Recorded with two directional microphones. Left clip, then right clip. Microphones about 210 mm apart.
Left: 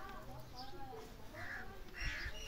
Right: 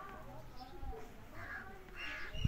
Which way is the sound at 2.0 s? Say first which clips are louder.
Even; 35° right (ahead or behind).